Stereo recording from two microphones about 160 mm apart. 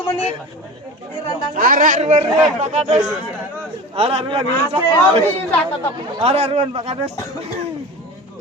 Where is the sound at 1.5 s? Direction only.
55° right (ahead or behind); by 7.0 s 35° right (ahead or behind).